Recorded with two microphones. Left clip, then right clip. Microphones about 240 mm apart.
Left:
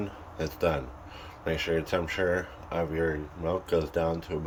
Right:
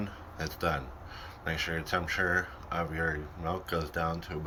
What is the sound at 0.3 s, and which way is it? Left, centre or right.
Speech, left.